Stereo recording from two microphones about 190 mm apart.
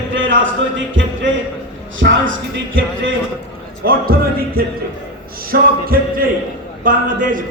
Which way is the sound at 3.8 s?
50° right (ahead or behind).